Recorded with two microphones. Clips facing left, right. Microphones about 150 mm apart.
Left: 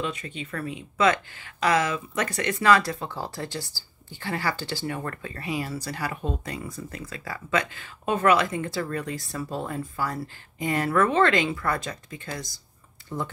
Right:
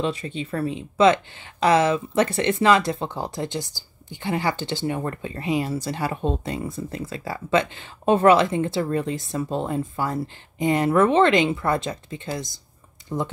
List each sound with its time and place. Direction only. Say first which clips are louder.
0.0 s speech: right 6 dB; 30° right (ahead or behind)